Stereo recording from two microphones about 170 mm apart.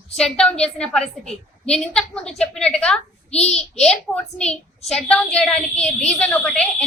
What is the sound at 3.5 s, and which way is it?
A woman's voice, 5° left (ahead or behind).